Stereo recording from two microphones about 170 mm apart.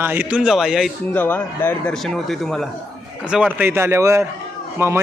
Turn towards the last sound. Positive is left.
turn(degrees=-15)  # may be behind; listen again after turning